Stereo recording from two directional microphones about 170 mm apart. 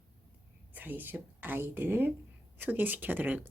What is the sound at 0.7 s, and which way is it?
Speech, 10° right (ahead or behind).